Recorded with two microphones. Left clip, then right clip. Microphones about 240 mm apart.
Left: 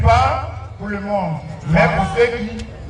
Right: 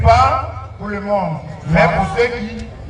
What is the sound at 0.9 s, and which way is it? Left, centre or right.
A man's voice, centre.